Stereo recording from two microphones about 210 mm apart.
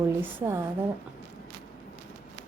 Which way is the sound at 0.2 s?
10° right (ahead or behind).